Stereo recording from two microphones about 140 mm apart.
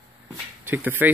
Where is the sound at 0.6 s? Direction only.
15° right (ahead or behind).